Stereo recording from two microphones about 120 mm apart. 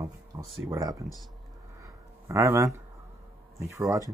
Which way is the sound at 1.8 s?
25° right (ahead or behind).